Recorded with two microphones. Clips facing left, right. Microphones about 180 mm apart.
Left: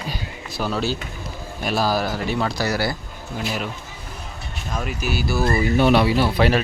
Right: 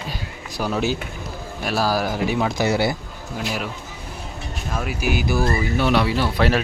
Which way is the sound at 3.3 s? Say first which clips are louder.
Even; centre (ahead or behind).